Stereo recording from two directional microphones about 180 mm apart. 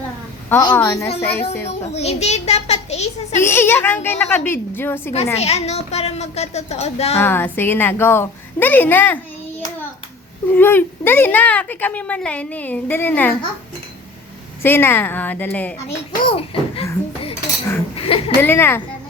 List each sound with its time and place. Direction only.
0.5 s a woman's voice: 10° left (ahead or behind)
1.9 s a woman's voice: 35° left (ahead or behind)
3.4 s a woman's voice: 10° left (ahead or behind)
5.1 s a woman's voice: 35° left (ahead or behind)
7.2 s a woman's voice: 10° left (ahead or behind)
10.5 s a woman's voice: 10° left (ahead or behind)
14.6 s a woman's voice: 10° left (ahead or behind)
16.2 s a woman's voice: 30° left (ahead or behind)
17.9 s chuckle: 30° left (ahead or behind)
18.3 s a woman's voice: 10° left (ahead or behind)